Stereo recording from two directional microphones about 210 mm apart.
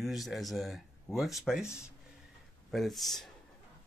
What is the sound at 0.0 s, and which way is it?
Speech, centre (ahead or behind).